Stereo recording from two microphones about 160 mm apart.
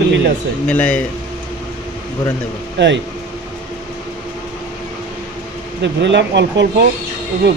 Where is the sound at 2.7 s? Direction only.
90° right.